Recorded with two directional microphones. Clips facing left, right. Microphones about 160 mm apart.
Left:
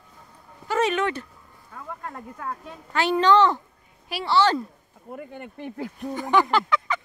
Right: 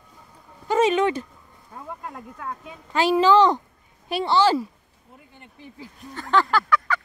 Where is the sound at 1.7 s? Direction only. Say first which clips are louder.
Right 1 dB; 25° right (ahead or behind).